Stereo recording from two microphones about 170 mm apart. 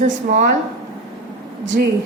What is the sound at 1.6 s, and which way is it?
Speech, 90° right.